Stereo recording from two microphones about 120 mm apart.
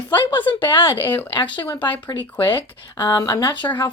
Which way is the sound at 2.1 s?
35° left (ahead or behind).